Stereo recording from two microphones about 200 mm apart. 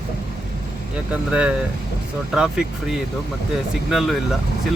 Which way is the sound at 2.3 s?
5° right (ahead or behind).